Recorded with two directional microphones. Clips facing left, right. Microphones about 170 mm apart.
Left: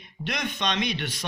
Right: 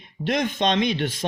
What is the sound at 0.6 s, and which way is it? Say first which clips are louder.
Speech: right 7 dB; 50° right (ahead or behind).